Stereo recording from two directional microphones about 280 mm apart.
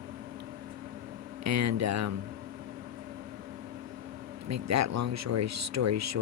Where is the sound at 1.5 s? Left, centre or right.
Right.